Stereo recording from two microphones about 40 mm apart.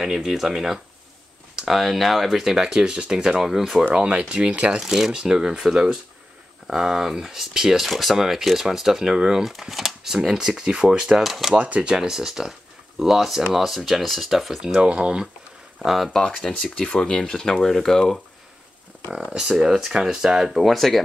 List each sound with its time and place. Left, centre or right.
0.0 s speech: centre
2.4 s speech: centre
3.9 s speech: right
4.7 s speech: centre
9.5 s speech: centre
11.1 s speech: centre
11.5 s speech: right
11.9 s speech: centre
13.7 s speech: centre
14.9 s speech: right
15.8 s speech: centre
16.1 s speech: centre
19.1 s speech: centre